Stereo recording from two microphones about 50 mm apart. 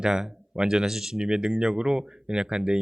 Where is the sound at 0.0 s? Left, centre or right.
Centre.